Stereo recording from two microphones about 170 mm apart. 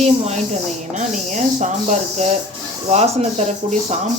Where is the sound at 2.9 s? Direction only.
40° right (ahead or behind).